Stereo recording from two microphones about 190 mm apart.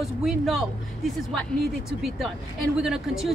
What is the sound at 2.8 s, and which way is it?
Speech, 5° right (ahead or behind).